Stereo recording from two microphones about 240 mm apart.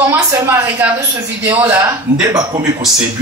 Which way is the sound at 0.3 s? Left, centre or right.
Centre.